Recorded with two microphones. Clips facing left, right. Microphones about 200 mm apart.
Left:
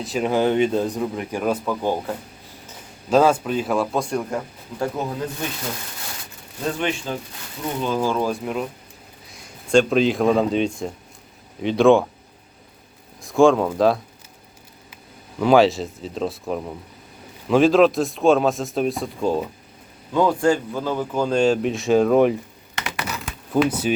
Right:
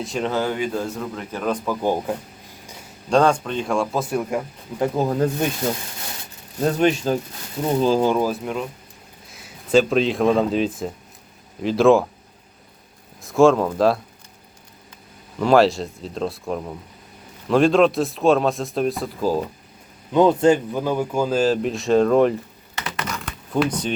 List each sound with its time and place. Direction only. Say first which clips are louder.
0.0 s speech: left 1 dB; centre (ahead or behind)
0.3 s a man's voice: left 6 dB; 20° left (ahead or behind)
1.7 s speech: right 1 dB; 15° right (ahead or behind)
3.1 s speech: left 1 dB; 5° left (ahead or behind); by 4.9 s 10° right (ahead or behind)
6.7 s speech: right 6 dB; 40° right (ahead or behind)
8.2 s speech: even; centre (ahead or behind)
13.2 s speech: even; centre (ahead or behind)
15.4 s speech: even; centre (ahead or behind)
20.1 s speech: right 3 dB; 20° right (ahead or behind); by 22.4 s 5° left (ahead or behind)
22.8 s typing: even; 10° left (ahead or behind)